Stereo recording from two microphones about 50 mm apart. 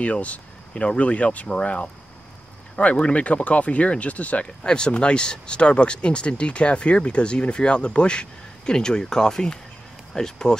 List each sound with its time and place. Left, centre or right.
0.0 s speech: left
4.6 s speech: centre